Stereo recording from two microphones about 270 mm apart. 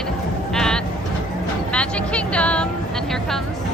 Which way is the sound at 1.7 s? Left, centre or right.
Centre.